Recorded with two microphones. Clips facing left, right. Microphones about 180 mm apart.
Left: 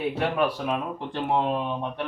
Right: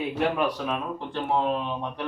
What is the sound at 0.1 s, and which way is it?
Speech, 10° left (ahead or behind).